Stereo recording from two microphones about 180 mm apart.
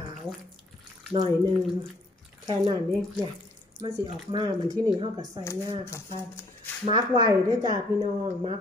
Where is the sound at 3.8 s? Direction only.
25° right (ahead or behind).